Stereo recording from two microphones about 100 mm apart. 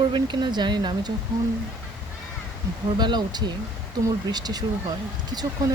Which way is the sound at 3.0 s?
45° right (ahead or behind).